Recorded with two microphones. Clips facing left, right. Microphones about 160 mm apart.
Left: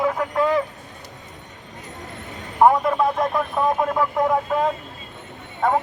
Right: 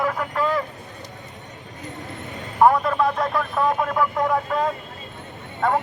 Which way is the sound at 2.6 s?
15° left (ahead or behind).